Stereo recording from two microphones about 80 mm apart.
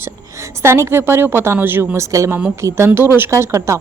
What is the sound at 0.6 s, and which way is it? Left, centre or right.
A woman's voice, right.